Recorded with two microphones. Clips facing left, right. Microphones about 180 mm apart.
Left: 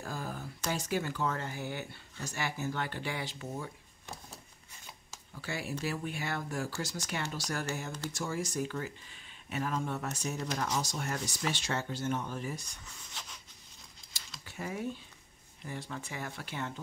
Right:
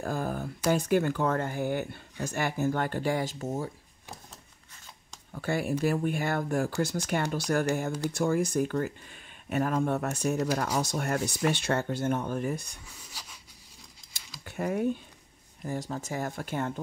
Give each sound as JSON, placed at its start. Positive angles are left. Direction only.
{"t": 0.0, "sound": "speech", "side_deg": -50}
{"t": 5.3, "sound": "speech", "side_deg": -50}
{"t": 12.8, "sound": "rub", "side_deg": -5}
{"t": 14.4, "sound": "speech", "side_deg": -55}
{"t": 15.6, "sound": "speech", "side_deg": -40}